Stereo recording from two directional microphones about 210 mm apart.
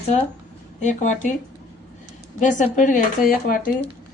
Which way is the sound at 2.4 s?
35° left (ahead or behind).